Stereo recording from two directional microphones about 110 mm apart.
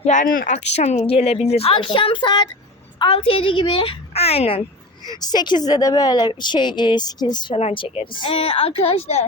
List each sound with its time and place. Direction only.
0.0 s a woman's voice: 90° left; by 2.5 s 40° left (ahead or behind)
3.0 s a woman's voice: 55° left (ahead or behind)
5.0 s a woman's voice: 40° left (ahead or behind)
7.5 s a woman's voice: 60° left (ahead or behind)